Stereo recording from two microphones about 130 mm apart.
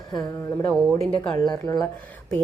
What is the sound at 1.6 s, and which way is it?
Speech, 30° left (ahead or behind).